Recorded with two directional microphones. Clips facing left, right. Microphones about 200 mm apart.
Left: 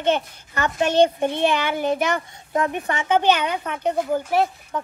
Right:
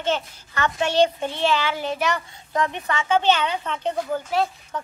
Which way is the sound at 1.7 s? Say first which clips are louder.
Left 5 dB; 55° left (ahead or behind).